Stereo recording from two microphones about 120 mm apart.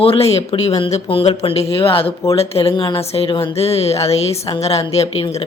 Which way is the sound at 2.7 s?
40° left (ahead or behind).